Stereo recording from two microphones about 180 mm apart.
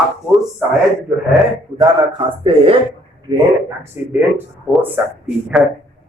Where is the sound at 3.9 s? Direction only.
10° right (ahead or behind).